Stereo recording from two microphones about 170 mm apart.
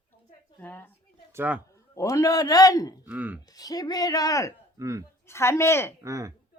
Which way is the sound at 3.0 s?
10° right (ahead or behind).